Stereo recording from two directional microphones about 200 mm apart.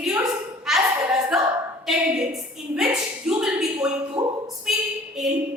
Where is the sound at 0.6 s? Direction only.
Centre (ahead or behind).